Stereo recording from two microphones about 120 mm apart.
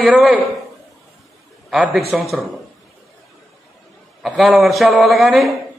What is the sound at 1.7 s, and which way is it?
Speech, 10° right (ahead or behind).